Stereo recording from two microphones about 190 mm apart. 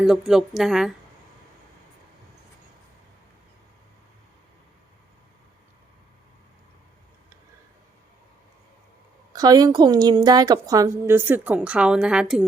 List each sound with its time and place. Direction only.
0.0 s a woman's voice: centre (ahead or behind)
9.3 s a woman's voice: 20° right (ahead or behind); by 12.5 s 5° right (ahead or behind)